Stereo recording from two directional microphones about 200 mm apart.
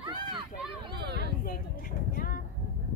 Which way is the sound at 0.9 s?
55° right (ahead or behind).